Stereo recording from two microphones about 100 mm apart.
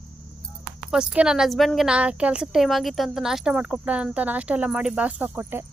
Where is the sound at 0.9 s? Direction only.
10° right (ahead or behind).